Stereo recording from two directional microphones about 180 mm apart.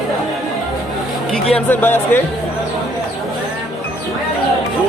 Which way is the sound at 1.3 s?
5° left (ahead or behind).